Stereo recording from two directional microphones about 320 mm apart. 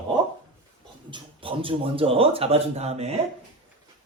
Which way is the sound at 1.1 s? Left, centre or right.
Centre.